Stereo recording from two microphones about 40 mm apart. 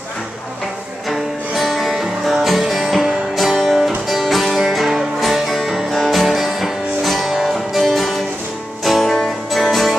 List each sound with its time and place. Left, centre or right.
1.1 s music: centre